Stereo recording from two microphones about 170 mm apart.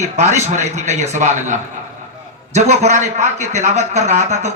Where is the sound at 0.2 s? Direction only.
40° right (ahead or behind).